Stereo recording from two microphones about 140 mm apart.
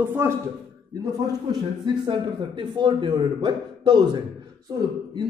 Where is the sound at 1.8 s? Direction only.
35° right (ahead or behind).